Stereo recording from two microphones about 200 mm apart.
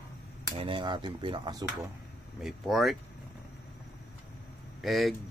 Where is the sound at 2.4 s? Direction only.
Centre (ahead or behind).